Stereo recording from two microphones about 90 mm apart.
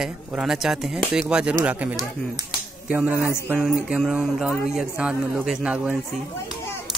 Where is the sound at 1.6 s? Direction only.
15° right (ahead or behind).